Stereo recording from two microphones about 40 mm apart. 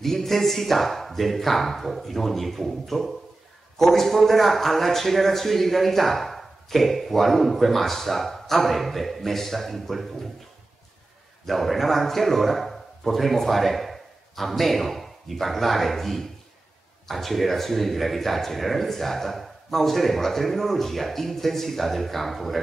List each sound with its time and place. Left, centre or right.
0.0 s a man's voice: centre
11.4 s a man's voice: centre